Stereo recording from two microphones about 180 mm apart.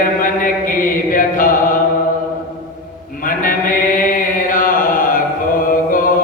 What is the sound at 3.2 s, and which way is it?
Chant, 50° left (ahead or behind).